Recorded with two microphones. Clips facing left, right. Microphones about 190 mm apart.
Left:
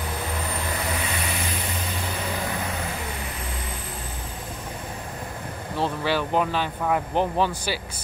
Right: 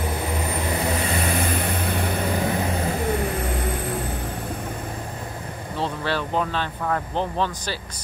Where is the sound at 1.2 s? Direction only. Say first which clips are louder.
Right 6 dB; 55° right (ahead or behind).